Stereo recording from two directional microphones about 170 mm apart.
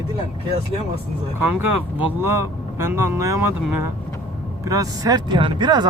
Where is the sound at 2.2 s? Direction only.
15° right (ahead or behind).